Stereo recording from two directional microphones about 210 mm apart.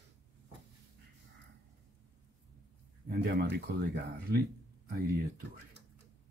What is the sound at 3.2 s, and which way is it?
Speech, 55° right (ahead or behind).